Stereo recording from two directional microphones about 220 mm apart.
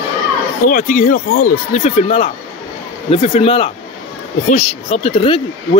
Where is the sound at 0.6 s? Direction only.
35° left (ahead or behind).